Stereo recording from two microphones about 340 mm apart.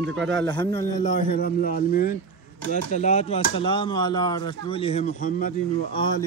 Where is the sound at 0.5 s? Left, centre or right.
Centre.